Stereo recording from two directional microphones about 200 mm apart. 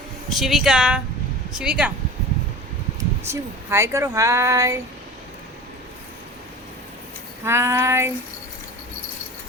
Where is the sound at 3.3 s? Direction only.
15° right (ahead or behind).